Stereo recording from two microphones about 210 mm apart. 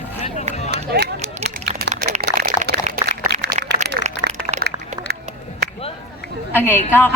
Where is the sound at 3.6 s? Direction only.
35° right (ahead or behind).